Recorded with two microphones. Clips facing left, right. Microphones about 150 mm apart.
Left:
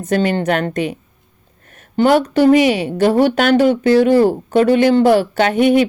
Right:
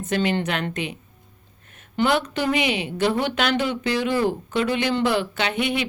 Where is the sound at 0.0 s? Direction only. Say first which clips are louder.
Left 6 dB; 45° left (ahead or behind).